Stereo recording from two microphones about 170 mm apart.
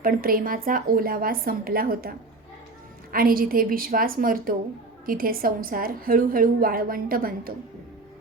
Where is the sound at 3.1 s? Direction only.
60° right (ahead or behind).